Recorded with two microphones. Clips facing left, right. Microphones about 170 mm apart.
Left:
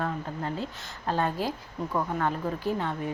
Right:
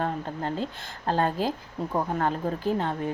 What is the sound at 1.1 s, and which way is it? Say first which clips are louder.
Speech: right 3 dB; 45° right (ahead or behind).